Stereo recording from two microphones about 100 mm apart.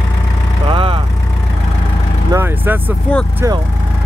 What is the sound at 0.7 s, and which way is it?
Vehicle, 60° right (ahead or behind).